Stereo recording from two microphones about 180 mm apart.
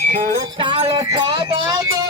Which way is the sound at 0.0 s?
40° right (ahead or behind).